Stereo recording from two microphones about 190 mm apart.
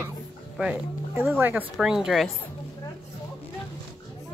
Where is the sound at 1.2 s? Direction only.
10° right (ahead or behind).